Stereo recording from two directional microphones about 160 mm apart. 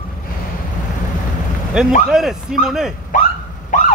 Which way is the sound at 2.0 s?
Centre (ahead or behind).